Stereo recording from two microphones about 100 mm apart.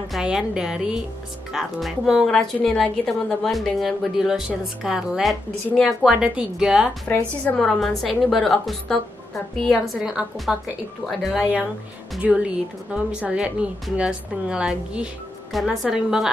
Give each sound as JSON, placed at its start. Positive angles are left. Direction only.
{"t": 0.1, "sound": "a woman's voice", "side_deg": -5}
{"t": 7.1, "sound": "a woman's voice", "side_deg": 15}
{"t": 7.5, "sound": "speech", "side_deg": 5}
{"t": 9.9, "sound": "a woman's voice", "side_deg": -5}